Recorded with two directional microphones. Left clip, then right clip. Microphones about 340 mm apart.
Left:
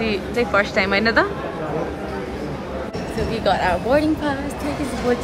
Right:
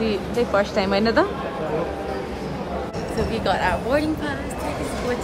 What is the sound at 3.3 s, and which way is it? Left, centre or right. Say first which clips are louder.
Speech: left 3 dB; centre.